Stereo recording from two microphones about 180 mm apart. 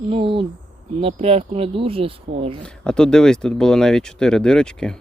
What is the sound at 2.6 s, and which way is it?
Speech, 5° left (ahead or behind).